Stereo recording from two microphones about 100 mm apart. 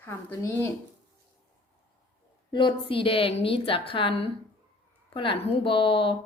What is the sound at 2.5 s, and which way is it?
A woman's voice, 60° left (ahead or behind).